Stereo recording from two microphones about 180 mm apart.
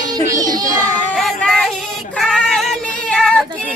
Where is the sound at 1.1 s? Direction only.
Centre (ahead or behind).